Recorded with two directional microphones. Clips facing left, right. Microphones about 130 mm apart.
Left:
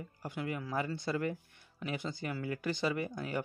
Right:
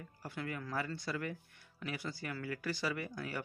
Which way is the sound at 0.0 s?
15° left (ahead or behind).